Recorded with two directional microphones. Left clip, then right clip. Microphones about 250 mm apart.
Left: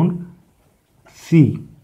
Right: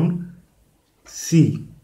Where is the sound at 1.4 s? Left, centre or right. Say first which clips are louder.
Left 3 dB; left.